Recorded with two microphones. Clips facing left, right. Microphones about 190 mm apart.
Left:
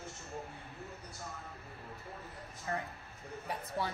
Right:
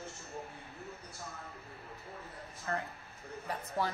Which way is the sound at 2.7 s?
15° left (ahead or behind).